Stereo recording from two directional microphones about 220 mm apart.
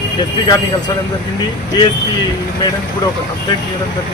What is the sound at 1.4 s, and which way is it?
A man's voice, 20° left (ahead or behind).